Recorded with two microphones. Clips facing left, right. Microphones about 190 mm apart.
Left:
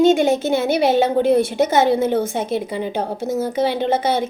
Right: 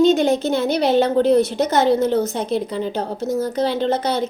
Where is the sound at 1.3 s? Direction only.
50° left (ahead or behind).